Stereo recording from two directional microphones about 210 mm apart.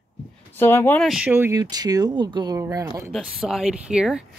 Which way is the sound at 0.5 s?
10° left (ahead or behind).